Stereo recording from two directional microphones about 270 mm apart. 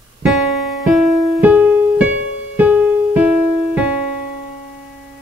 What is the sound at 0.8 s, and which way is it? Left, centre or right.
Music, centre.